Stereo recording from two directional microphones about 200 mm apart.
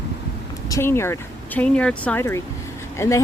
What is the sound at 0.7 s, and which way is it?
Speech, 15° left (ahead or behind).